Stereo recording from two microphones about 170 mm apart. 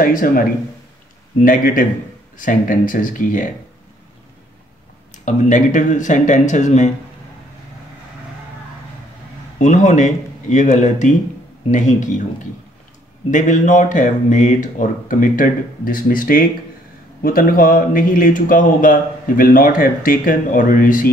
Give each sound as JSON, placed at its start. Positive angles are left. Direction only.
{"t": 0.0, "sound": "speech", "side_deg": 55}
{"t": 1.4, "sound": "speech", "side_deg": 55}
{"t": 5.1, "sound": "speech", "side_deg": 45}
{"t": 9.6, "sound": "speech", "side_deg": 45}
{"t": 13.3, "sound": "speech", "side_deg": 50}